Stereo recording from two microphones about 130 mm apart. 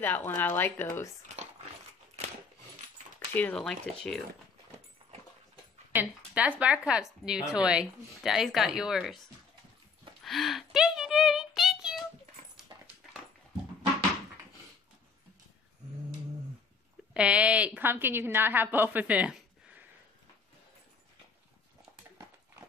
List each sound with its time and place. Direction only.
0.0 s speech: 15° left (ahead or behind)
3.3 s a woman's voice: 10° left (ahead or behind)
5.9 s a woman's voice: 10° right (ahead or behind)
10.2 s a sound: centre (ahead or behind)
12.7 s dog: 35° right (ahead or behind)
17.1 s a woman's voice: 10° right (ahead or behind)